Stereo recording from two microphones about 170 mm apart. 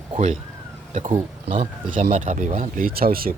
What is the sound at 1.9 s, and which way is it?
Speech, 45° right (ahead or behind).